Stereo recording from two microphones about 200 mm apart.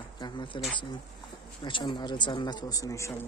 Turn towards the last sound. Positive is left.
turn(degrees=15)  # may be behind; listen again after turning